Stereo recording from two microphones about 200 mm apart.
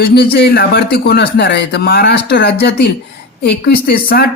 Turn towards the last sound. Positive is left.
turn(degrees=50)  # may be behind; listen again after turning